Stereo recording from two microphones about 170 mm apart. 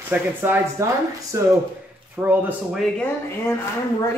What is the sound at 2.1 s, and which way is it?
Speech, 10° right (ahead or behind).